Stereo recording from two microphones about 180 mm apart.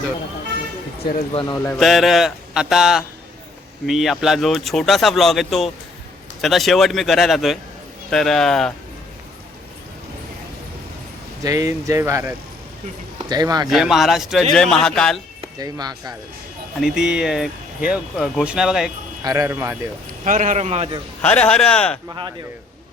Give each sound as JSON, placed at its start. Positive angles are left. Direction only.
{"t": 1.3, "sound": "speech", "side_deg": 30}
{"t": 1.8, "sound": "speech", "side_deg": 0}
{"t": 11.4, "sound": "speech", "side_deg": -20}
{"t": 13.7, "sound": "speech", "side_deg": 0}
{"t": 15.4, "sound": "speech", "side_deg": -20}
{"t": 16.8, "sound": "speech", "side_deg": -5}
{"t": 19.2, "sound": "speech", "side_deg": -20}
{"t": 20.2, "sound": "a man's voice", "side_deg": -45}
{"t": 21.2, "sound": "speech", "side_deg": 10}